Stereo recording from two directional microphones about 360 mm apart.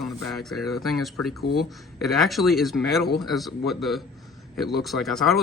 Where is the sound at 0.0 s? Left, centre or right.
Centre.